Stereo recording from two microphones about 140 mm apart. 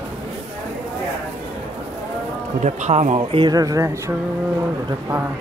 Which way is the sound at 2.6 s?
55° right (ahead or behind).